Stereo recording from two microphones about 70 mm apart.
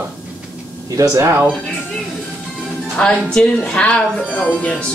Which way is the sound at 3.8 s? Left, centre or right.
Centre.